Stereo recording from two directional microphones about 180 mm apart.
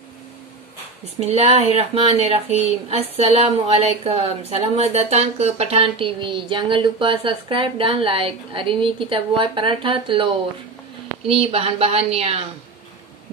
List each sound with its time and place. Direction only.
1.2 s speech: 35° right (ahead or behind)